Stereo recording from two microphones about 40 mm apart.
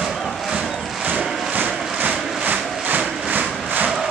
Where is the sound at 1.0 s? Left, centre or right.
Right.